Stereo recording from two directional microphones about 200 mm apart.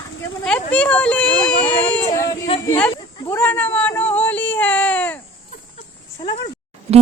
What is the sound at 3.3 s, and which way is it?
Speech, 10° left (ahead or behind).